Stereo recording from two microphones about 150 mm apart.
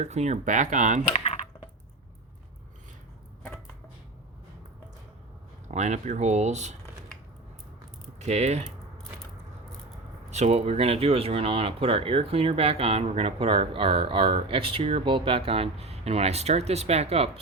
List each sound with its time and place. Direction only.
0.0 s speech: 50° right (ahead or behind)
1.1 s typing: 40° left (ahead or behind)
5.6 s speech: 50° right (ahead or behind)
8.2 s speech: 50° right (ahead or behind)
10.3 s speech: 45° right (ahead or behind)